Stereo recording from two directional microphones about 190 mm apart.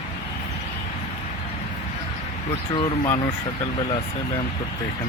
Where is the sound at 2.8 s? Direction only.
25° left (ahead or behind).